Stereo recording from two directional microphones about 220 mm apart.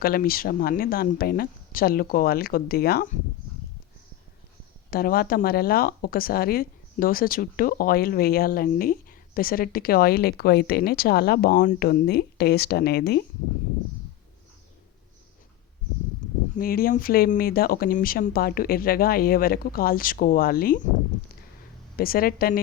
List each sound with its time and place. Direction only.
0.0 s speech: 40° left (ahead or behind)
4.9 s speech: 45° left (ahead or behind)
16.6 s speech: 40° left (ahead or behind)
21.9 s speech: 40° left (ahead or behind)